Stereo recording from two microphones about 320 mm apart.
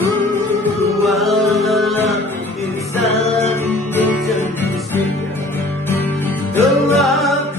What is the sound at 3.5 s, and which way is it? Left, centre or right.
Music, centre.